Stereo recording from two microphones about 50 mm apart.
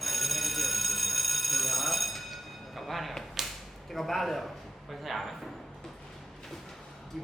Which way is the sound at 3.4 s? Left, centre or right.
Centre.